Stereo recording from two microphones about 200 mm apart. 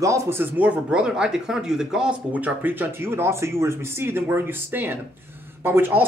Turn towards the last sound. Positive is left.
turn(degrees=-10)  # may be behind; listen again after turning